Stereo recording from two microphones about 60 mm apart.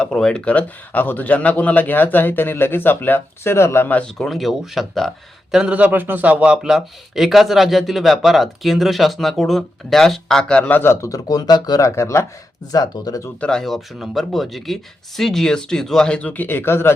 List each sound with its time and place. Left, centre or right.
0.0 s a man's voice: centre; by 3.8 s left
4.0 s speech: centre
5.7 s speech: right
6.6 s speech: centre
10.6 s a man's voice: left
11.0 s speech: left
11.9 s speech: left
12.7 s speech: left
13.5 s speech: centre; by 16.9 s left